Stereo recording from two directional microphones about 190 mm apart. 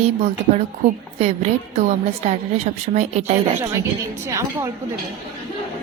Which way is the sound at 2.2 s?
35° right (ahead or behind).